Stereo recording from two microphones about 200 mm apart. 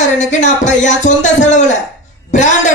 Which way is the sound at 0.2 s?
35° left (ahead or behind).